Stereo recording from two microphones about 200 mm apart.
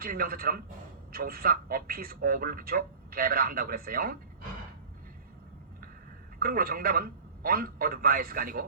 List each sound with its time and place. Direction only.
0.0 s a man's voice: 45° right (ahead or behind)
6.4 s a man's voice: 45° right (ahead or behind)